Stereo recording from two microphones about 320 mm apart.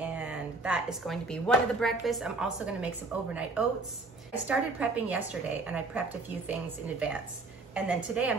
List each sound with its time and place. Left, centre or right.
0.0 s a woman's voice: centre
4.5 s a woman's voice: centre